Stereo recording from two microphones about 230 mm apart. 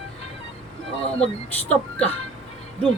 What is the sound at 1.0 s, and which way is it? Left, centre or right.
Speech, left.